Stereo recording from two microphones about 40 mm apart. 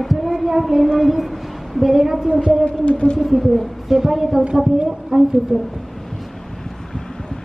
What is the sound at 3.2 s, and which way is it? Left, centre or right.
A woman's voice, centre.